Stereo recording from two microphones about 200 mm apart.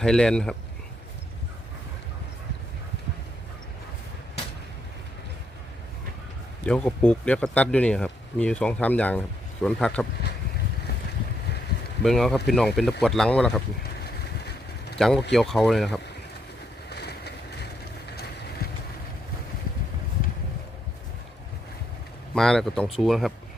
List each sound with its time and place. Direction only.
0.0 s speech: 5° left (ahead or behind)
6.7 s speech: 5° left (ahead or behind)
12.0 s speech: 5° left (ahead or behind)
13.8 s boat: 55° left (ahead or behind)
14.9 s speech: centre (ahead or behind)
16.9 s vehicle: 55° left (ahead or behind)
22.4 s speech: 5° left (ahead or behind)